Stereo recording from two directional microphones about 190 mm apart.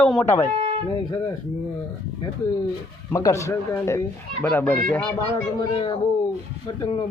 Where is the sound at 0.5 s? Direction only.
35° right (ahead or behind).